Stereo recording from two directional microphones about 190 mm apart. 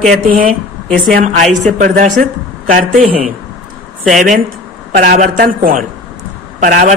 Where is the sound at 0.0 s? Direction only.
40° right (ahead or behind).